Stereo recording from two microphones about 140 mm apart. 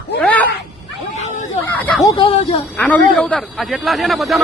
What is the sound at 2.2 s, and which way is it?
Speech, 45° left (ahead or behind).